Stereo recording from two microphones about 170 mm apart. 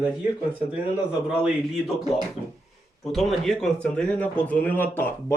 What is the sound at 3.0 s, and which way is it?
A man's voice, centre (ahead or behind).